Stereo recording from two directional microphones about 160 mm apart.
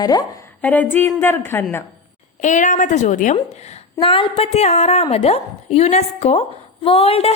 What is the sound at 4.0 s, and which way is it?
A woman's voice, 35° left (ahead or behind).